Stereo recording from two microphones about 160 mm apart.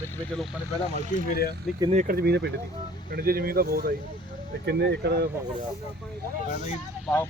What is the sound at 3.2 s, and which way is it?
Speech, 70° right (ahead or behind).